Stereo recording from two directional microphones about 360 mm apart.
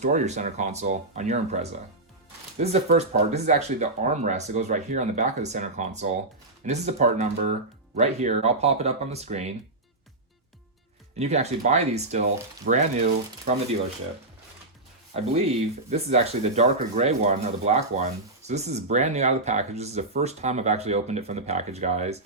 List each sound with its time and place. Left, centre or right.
0.0 s speech: centre
11.2 s speech: centre
15.9 s speech: centre